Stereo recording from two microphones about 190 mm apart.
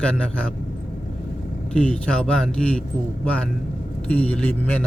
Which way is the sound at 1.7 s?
5° left (ahead or behind).